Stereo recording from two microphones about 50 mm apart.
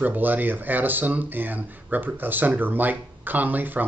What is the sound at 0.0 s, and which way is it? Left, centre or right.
Speech, right.